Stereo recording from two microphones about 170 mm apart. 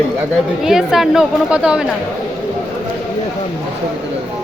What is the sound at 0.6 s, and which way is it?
A woman's voice, 5° right (ahead or behind).